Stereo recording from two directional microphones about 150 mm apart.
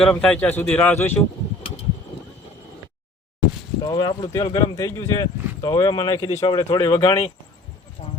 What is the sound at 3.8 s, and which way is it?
Speech, 30° left (ahead or behind).